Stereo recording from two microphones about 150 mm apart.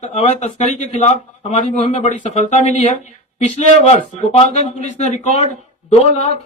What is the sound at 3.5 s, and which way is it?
Speech, 45° left (ahead or behind).